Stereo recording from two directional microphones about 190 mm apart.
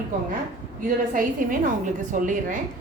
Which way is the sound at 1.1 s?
45° right (ahead or behind).